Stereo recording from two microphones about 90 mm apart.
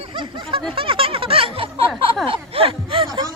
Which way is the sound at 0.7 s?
85° right.